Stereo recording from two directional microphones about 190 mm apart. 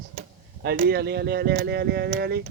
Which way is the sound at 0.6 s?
55° right (ahead or behind).